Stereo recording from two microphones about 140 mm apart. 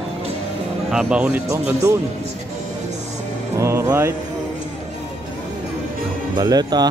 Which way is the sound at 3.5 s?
20° right (ahead or behind).